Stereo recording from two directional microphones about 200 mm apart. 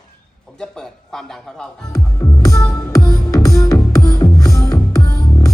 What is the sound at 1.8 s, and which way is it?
Music, 15° left (ahead or behind).